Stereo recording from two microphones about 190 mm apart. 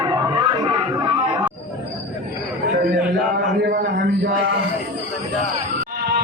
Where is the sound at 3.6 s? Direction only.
60° right (ahead or behind).